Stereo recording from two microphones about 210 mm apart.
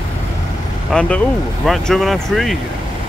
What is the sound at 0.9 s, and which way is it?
Speech, 5° left (ahead or behind).